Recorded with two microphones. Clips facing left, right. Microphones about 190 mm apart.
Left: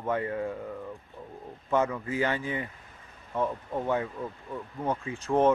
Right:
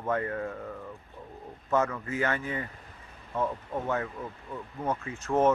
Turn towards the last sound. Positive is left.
turn(degrees=15)  # may be behind; listen again after turning